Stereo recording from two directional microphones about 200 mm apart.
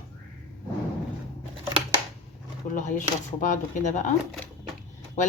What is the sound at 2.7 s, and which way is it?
Speech, 40° left (ahead or behind).